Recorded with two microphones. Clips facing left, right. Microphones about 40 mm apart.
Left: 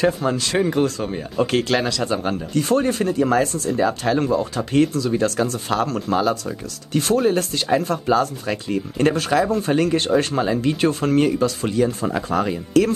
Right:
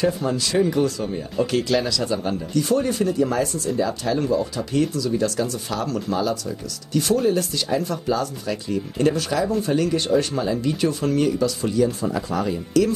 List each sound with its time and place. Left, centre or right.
0.0 s speech: left